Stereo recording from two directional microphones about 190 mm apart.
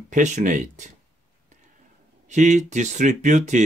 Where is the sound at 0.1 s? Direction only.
40° right (ahead or behind).